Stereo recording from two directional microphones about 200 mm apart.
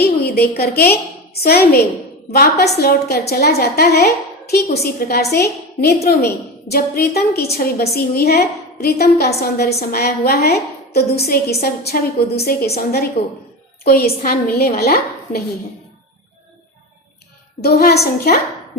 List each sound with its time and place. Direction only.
0.0 s a woman's voice: 50° left (ahead or behind)
17.6 s a woman's voice: 50° left (ahead or behind)